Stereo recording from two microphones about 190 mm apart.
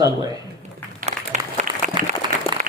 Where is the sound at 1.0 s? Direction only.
40° right (ahead or behind).